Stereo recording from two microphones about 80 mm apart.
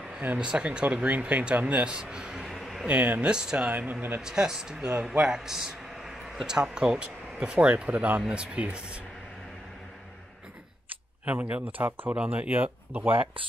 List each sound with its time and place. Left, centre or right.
0.4 s speech: centre
2.9 s speech: centre
4.2 s a man's voice: centre
11.2 s speech: centre